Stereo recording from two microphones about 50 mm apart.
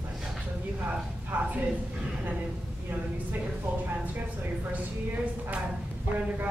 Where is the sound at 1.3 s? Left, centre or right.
Right.